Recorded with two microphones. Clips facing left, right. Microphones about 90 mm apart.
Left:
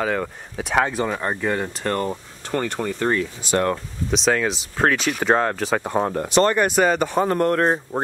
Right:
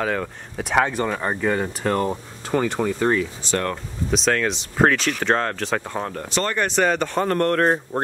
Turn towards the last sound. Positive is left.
turn(degrees=0)  # may be behind; listen again after turning